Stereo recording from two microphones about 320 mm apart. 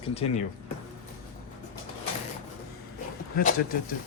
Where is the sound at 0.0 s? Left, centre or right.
Centre.